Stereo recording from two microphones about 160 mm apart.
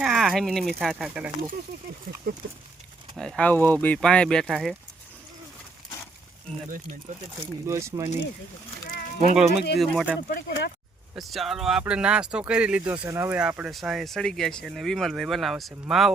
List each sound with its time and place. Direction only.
0.0 s speech: centre (ahead or behind)
2.3 s speech: 65° right (ahead or behind)
3.2 s speech: 5° left (ahead or behind)
6.7 s speech: 55° right (ahead or behind)
7.7 s speech: 15° right (ahead or behind)
8.9 s a sound: 60° left (ahead or behind)
9.3 s speech: 5° right (ahead or behind)
10.2 s speech: 85° left
11.1 s speech: centre (ahead or behind)